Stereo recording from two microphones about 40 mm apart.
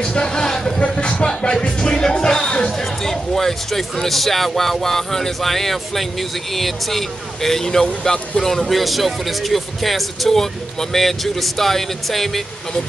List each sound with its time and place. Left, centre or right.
0.0 s vehicle: left
0.8 s speech: left; by 12.3 s centre